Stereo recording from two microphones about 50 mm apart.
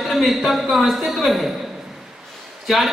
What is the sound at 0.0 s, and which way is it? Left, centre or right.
Speech, centre.